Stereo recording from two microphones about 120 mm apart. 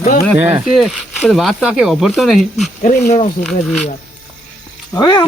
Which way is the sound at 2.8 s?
90° left.